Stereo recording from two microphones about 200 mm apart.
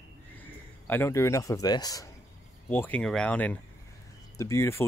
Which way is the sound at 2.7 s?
10° left (ahead or behind).